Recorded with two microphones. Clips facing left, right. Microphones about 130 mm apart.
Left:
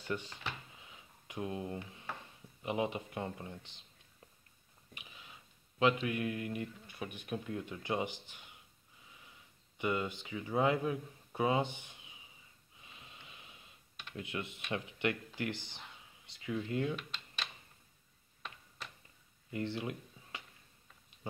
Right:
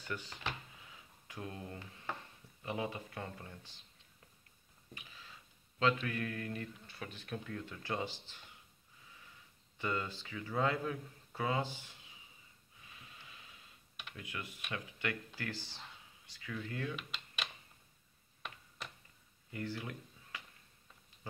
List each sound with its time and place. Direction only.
0.0 s speech: 25° left (ahead or behind)
0.8 s a sound: 20° left (ahead or behind)
2.6 s speech: 20° left (ahead or behind)
4.9 s speech: 15° left (ahead or behind)
9.8 s speech: 15° left (ahead or behind)
12.8 s snort: 20° left (ahead or behind)
14.1 s speech: 25° left (ahead or behind)
16.9 s typing: 10° right (ahead or behind)
19.5 s a sound: 25° left (ahead or behind)